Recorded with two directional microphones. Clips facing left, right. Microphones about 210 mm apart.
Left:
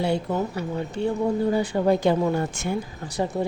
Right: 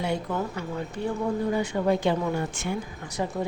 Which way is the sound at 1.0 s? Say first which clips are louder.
Left 4 dB; 25° left (ahead or behind).